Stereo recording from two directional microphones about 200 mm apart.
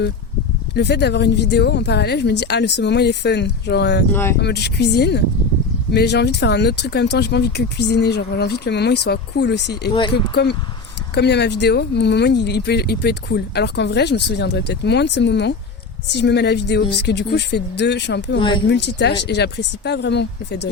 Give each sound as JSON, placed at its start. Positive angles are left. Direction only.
{"t": 0.8, "sound": "speech", "side_deg": 60}
{"t": 4.1, "sound": "speech", "side_deg": 10}
{"t": 4.4, "sound": "speech", "side_deg": 55}
{"t": 11.1, "sound": "speech", "side_deg": 55}
{"t": 18.3, "sound": "speech", "side_deg": 25}
{"t": 18.7, "sound": "speech", "side_deg": 55}